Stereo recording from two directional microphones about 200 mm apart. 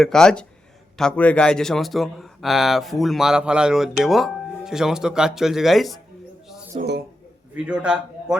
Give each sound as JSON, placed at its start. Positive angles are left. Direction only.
{"t": 0.0, "sound": "a man's voice", "side_deg": 5}
{"t": 6.7, "sound": "speech", "side_deg": -55}
{"t": 7.5, "sound": "a man's voice", "side_deg": -5}